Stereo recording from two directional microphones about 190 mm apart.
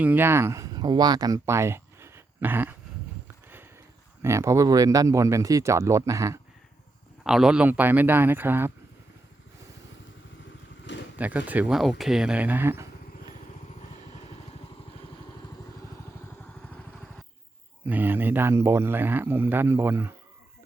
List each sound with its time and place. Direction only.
0.0 s speech: 10° right (ahead or behind)
4.2 s speech: 15° right (ahead or behind)
7.3 s speech: 5° right (ahead or behind)
11.2 s speech: 10° right (ahead or behind)
17.8 s speech: 10° right (ahead or behind)